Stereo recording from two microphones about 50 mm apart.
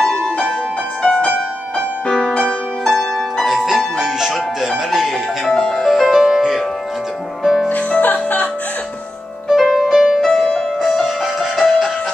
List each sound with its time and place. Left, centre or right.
0.0 s music: centre
2.9 s harp: centre
3.4 s music: centre
5.5 s music: centre
5.9 s music: centre
7.7 s music: left
9.5 s music: centre